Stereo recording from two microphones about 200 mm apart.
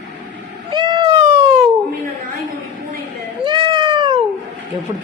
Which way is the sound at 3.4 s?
25° right (ahead or behind).